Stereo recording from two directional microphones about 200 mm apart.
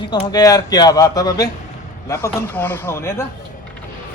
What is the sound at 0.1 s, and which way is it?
Speech, 20° left (ahead or behind).